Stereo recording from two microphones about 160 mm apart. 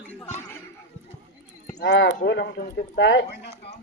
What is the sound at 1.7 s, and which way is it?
Speech, 90° left.